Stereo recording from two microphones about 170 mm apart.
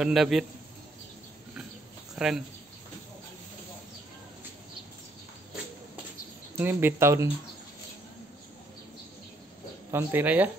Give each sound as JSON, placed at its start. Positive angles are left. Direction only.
{"t": 0.0, "sound": "a man's voice", "side_deg": 0}
{"t": 2.1, "sound": "speech", "side_deg": -5}
{"t": 6.5, "sound": "speech", "side_deg": -15}
{"t": 9.8, "sound": "speech", "side_deg": -15}